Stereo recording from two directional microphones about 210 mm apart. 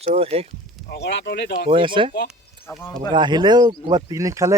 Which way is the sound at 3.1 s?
20° right (ahead or behind).